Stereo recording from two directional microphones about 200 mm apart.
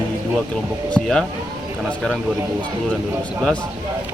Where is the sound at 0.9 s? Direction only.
5° left (ahead or behind).